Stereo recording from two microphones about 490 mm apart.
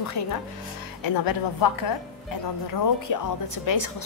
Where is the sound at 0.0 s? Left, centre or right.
Left.